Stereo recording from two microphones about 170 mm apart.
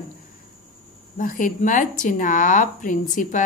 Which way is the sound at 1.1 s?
50° left (ahead or behind).